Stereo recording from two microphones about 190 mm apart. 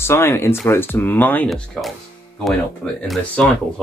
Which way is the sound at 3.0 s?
Centre (ahead or behind).